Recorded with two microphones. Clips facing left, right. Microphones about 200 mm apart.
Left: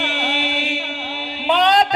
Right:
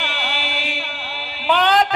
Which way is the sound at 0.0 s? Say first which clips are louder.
Left 5 dB; 30° left (ahead or behind).